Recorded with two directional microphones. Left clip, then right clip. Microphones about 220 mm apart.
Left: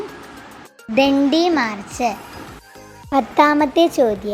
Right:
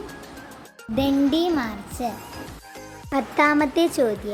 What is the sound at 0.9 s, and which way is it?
Speech, 15° left (ahead or behind).